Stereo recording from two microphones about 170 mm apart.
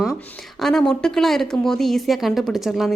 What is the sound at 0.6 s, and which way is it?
A woman's voice, 5° left (ahead or behind).